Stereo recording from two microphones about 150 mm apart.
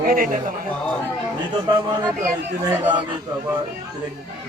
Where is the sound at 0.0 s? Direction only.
70° right (ahead or behind).